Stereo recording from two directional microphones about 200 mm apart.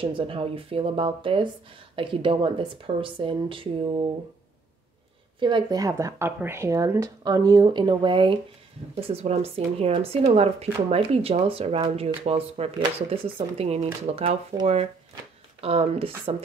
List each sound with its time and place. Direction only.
0.0 s speech: 25° right (ahead or behind)
5.4 s speech: 20° right (ahead or behind)